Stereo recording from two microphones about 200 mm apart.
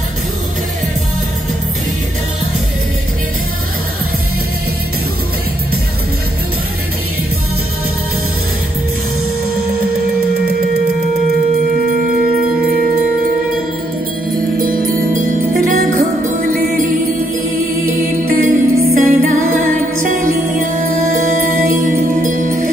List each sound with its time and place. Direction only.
14.6 s music: 45° right (ahead or behind)
18.3 s music: 45° right (ahead or behind)
21.2 s music: 40° right (ahead or behind)